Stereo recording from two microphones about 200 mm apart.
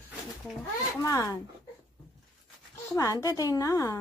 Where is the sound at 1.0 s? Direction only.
15° left (ahead or behind).